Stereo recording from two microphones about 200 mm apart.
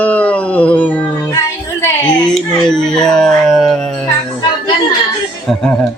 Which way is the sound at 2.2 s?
5° left (ahead or behind).